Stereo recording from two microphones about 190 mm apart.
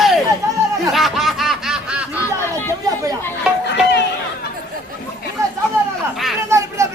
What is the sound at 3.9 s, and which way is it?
Chatter, 65° left (ahead or behind).